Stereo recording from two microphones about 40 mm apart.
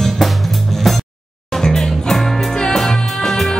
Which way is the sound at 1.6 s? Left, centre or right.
Centre.